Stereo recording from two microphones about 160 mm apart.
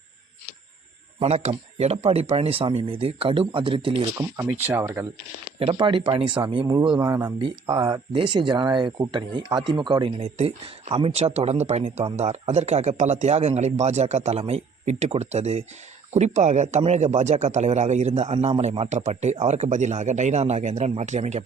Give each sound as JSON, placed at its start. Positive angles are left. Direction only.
{"t": 1.2, "sound": "speech", "side_deg": -40}
{"t": 4.2, "sound": "speech", "side_deg": -15}
{"t": 5.5, "sound": "speech", "side_deg": -35}